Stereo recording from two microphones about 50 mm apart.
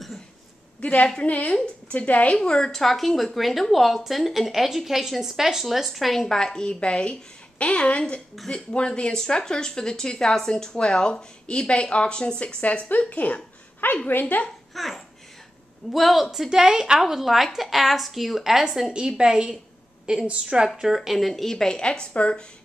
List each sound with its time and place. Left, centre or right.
0.7 s a woman's voice: left
14.7 s laughter: centre
15.9 s a woman's voice: centre